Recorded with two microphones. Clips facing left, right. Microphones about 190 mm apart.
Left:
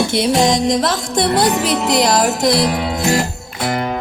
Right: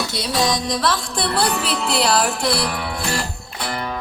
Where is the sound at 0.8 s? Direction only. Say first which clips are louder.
Left 5 dB; 45° left (ahead or behind).